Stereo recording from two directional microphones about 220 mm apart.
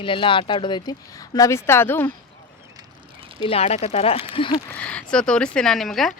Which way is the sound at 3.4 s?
25° left (ahead or behind).